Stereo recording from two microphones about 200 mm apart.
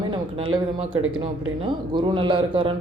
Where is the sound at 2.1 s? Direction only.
25° right (ahead or behind).